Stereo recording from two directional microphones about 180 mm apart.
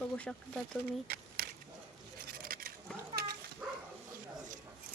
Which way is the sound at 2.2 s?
55° right (ahead or behind).